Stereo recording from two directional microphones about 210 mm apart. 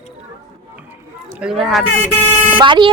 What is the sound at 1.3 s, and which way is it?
Speech, 5° right (ahead or behind).